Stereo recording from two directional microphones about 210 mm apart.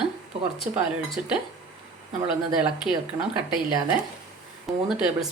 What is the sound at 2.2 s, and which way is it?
A woman's voice, 5° right (ahead or behind).